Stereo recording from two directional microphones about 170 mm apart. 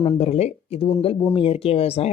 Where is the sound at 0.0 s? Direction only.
35° left (ahead or behind).